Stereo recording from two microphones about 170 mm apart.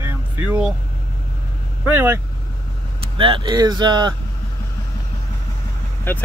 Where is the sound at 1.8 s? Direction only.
15° right (ahead or behind).